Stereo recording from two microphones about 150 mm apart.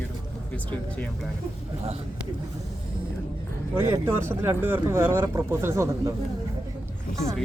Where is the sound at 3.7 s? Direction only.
15° right (ahead or behind).